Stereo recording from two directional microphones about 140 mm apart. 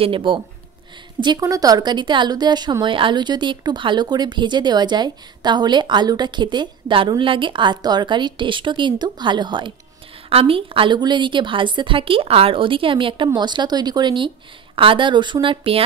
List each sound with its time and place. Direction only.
0.0 s speech: 40° right (ahead or behind)
1.2 s speech: 30° right (ahead or behind)